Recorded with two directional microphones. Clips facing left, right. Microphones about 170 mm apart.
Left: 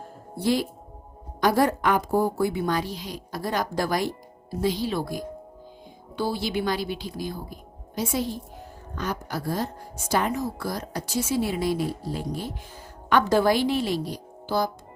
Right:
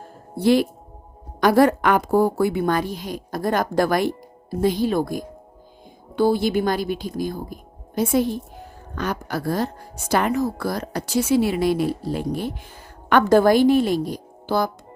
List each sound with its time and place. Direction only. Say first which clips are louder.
0.3 s a woman's voice: right 7 dB; 65° right (ahead or behind)
9.0 s a woman's voice: right 4 dB; 70° right (ahead or behind)